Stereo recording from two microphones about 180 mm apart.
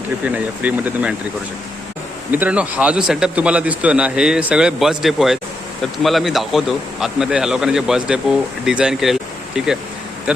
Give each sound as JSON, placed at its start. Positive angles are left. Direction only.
{"t": 0.3, "sound": "speech", "side_deg": -10}
{"t": 2.3, "sound": "a man's voice", "side_deg": -10}